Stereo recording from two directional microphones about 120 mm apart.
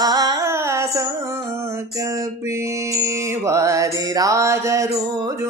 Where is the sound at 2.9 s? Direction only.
25° right (ahead or behind).